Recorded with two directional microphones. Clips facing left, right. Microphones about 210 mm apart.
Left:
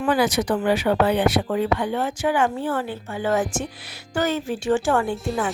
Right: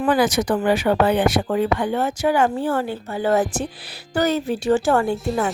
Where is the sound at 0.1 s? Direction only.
45° right (ahead or behind).